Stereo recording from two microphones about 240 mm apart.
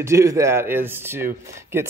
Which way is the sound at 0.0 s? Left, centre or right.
Centre.